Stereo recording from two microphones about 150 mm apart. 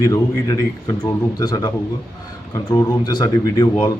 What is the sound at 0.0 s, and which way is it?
Speech, 25° left (ahead or behind).